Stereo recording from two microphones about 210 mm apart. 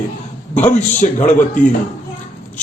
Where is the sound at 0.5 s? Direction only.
30° left (ahead or behind).